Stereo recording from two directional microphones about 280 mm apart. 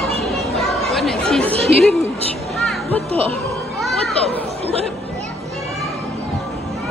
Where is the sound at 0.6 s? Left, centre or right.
Centre.